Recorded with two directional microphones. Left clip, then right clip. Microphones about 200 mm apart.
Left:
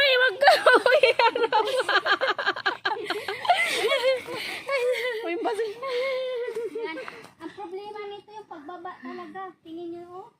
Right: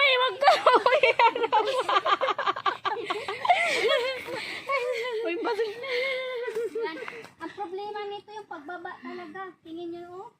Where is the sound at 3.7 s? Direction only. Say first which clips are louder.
Left 2 dB; 55° left (ahead or behind).